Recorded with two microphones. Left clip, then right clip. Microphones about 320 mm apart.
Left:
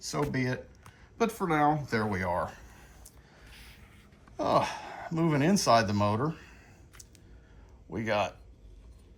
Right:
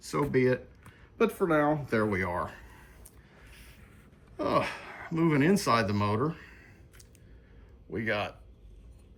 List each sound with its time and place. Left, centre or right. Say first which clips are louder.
0.3 s speech: right 7 dB; centre
3.5 s a sound: left 4 dB; left
4.4 s speech: left 2 dB; centre
7.9 s speech: left 2 dB; centre